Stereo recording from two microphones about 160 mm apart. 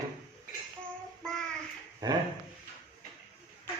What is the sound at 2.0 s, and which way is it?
Speech, 25° right (ahead or behind).